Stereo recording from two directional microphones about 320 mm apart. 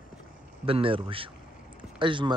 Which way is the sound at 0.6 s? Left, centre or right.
Centre.